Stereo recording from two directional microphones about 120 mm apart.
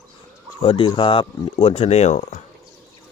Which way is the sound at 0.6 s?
45° left (ahead or behind).